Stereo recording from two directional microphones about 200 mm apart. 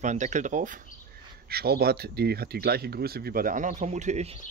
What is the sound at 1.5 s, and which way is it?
Speech, 50° right (ahead or behind).